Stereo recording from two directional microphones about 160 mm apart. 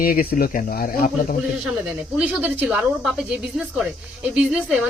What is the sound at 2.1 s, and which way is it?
Speech, 5° right (ahead or behind).